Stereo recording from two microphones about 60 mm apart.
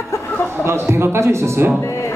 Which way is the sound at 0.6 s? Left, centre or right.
Right.